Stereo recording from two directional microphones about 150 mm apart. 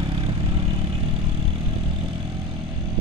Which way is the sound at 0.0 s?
35° right (ahead or behind).